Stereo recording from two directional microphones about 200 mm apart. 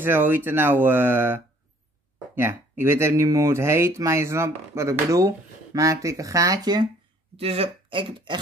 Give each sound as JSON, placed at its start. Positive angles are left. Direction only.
{"t": 0.0, "sound": "speech", "side_deg": -10}